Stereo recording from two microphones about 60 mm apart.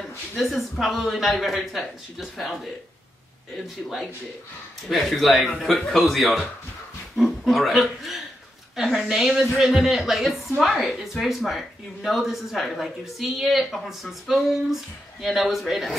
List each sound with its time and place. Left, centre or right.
0.4 s a woman's voice: centre